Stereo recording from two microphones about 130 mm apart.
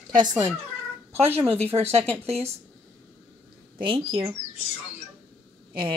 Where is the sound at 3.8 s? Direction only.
45° right (ahead or behind).